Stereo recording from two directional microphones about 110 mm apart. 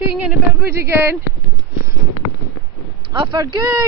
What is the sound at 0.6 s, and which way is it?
Speech, 20° right (ahead or behind).